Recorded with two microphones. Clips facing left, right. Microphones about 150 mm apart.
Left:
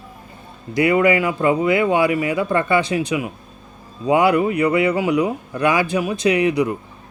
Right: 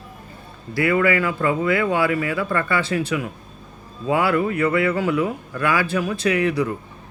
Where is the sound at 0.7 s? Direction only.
20° left (ahead or behind).